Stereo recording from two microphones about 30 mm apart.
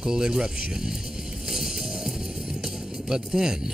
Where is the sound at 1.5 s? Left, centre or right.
Centre.